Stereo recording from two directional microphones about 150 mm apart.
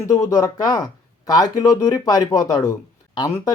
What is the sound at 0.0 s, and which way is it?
Speech, 20° left (ahead or behind).